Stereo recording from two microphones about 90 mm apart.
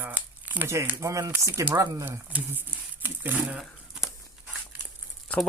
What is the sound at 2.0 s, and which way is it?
Speech, 20° right (ahead or behind).